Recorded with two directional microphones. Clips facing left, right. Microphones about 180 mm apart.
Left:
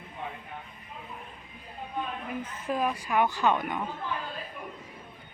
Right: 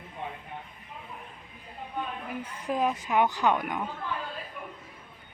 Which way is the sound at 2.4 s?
15° right (ahead or behind).